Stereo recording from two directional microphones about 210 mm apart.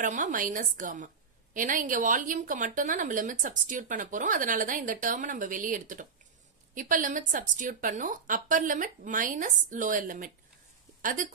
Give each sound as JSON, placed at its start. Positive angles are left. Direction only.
{"t": 0.0, "sound": "a woman's voice", "side_deg": -40}